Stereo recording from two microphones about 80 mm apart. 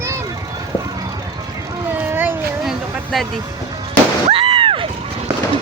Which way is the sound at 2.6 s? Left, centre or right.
Centre.